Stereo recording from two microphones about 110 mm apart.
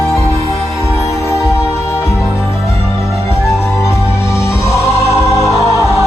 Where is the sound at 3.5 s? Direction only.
25° left (ahead or behind).